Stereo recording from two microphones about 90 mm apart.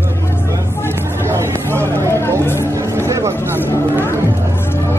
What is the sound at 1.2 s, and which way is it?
Hubbub, 30° right (ahead or behind).